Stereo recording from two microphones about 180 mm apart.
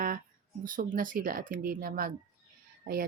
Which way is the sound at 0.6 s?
50° right (ahead or behind).